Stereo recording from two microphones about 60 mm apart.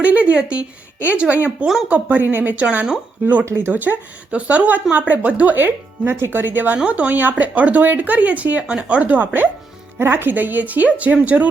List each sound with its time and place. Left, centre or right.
0.0 s a sound: right
0.9 s speech: right
3.4 s speech: right
3.7 s speech: right
6.7 s speech: right